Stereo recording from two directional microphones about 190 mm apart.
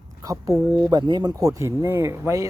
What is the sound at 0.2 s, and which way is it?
Speech, 15° right (ahead or behind).